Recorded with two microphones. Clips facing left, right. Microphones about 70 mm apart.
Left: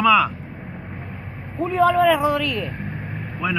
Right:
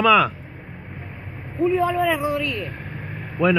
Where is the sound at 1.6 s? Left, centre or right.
Left.